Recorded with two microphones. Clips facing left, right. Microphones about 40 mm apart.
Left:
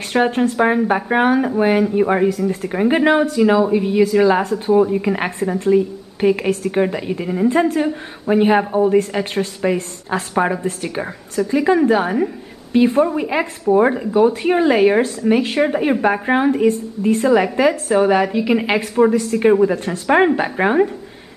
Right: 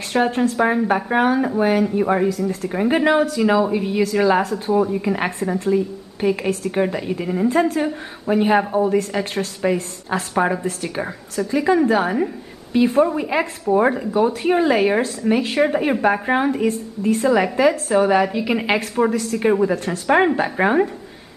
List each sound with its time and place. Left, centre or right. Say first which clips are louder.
0.1 s speech: left 2 dB; centre
0.7 s a woman's voice: left 2 dB; centre
1.0 s speech: left 2 dB; centre
4.4 s a woman's voice: left 3 dB; centre
9.2 s a woman's voice: left 3 dB; left
10.3 s a woman's voice: left 1 dB; centre